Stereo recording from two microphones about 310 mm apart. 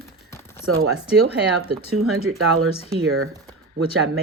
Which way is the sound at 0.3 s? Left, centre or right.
Centre.